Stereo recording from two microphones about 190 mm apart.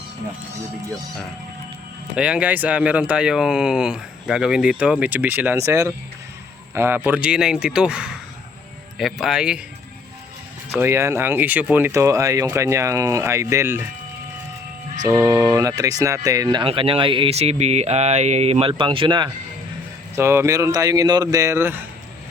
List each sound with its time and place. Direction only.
2.1 s speech: 5° right (ahead or behind)
10.8 s speech: 15° right (ahead or behind)
15.2 s speech: 15° right (ahead or behind)
20.1 s speech: 15° right (ahead or behind)